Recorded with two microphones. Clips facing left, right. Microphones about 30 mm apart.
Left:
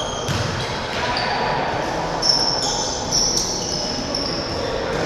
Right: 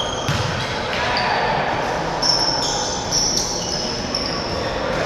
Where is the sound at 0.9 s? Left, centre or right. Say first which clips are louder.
Right 2 dB; centre.